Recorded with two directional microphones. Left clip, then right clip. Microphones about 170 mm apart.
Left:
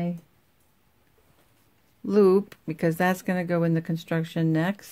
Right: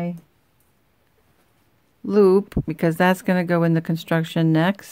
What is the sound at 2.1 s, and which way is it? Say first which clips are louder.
Speech: right 4 dB; 15° right (ahead or behind).